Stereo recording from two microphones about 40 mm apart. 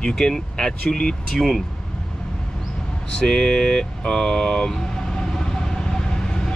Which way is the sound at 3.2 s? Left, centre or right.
Centre.